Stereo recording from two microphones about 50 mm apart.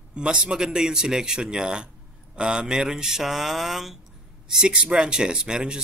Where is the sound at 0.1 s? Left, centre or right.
Right.